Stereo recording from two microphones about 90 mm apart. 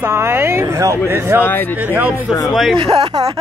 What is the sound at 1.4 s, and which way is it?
Speech, 20° left (ahead or behind).